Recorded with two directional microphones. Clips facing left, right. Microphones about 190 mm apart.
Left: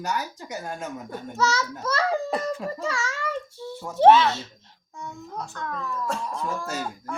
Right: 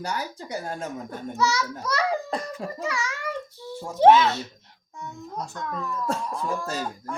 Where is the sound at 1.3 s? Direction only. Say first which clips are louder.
Even; 15° right (ahead or behind).